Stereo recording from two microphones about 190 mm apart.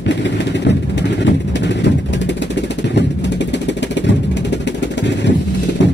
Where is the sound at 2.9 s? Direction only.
65° left (ahead or behind).